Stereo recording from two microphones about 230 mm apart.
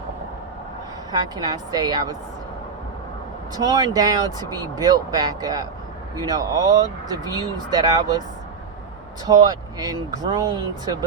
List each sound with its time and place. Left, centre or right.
1.1 s speech: centre
3.5 s speech: centre
9.2 s speech: centre